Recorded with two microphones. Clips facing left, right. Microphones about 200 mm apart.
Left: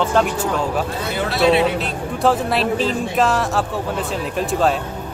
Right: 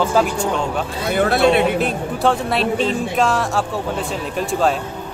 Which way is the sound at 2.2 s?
Centre (ahead or behind).